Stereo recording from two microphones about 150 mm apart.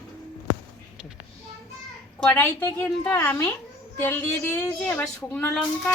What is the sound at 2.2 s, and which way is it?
A woman's voice, 15° left (ahead or behind).